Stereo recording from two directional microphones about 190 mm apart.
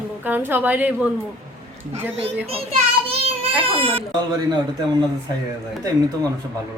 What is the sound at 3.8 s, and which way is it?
Speech, 30° right (ahead or behind).